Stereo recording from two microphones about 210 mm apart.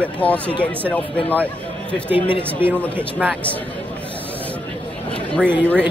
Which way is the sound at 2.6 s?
10° right (ahead or behind).